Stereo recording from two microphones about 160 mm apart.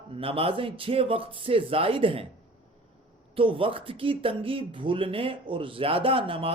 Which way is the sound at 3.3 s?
35° right (ahead or behind).